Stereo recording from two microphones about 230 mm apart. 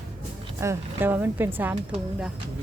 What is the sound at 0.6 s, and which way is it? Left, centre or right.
A woman's voice, centre.